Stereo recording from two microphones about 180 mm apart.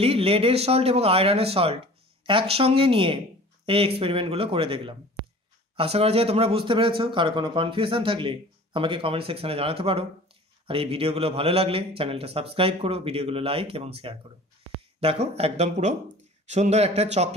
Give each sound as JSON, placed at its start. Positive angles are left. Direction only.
{"t": 0.0, "sound": "a man's voice", "side_deg": -35}